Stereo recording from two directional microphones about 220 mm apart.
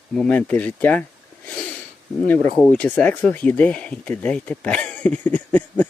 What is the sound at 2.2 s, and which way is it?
Speech, 5° left (ahead or behind).